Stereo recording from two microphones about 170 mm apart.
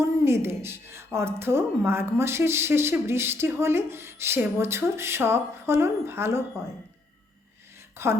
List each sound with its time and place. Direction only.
0.0 s a woman's voice: 15° right (ahead or behind)
8.0 s a woman's voice: 15° right (ahead or behind)